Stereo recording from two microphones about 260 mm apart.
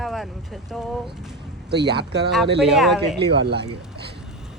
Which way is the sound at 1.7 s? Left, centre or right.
Right.